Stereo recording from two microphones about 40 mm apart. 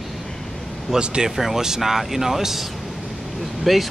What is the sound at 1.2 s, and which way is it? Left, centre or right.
Speech, centre.